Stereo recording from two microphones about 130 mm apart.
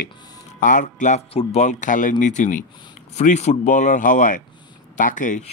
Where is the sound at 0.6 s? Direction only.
80° left.